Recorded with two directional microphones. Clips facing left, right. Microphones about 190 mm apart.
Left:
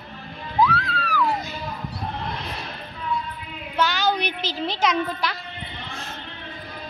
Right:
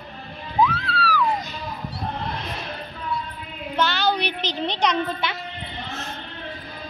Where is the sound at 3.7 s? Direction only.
10° left (ahead or behind).